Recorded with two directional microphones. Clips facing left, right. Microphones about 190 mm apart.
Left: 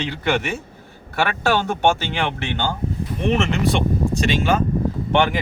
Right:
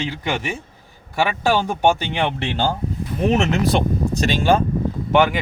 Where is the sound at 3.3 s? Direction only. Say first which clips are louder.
Right 1 dB; 40° right (ahead or behind).